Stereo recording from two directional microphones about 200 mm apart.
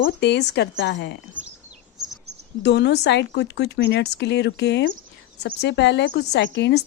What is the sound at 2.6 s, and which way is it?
A woman's voice, 60° left (ahead or behind).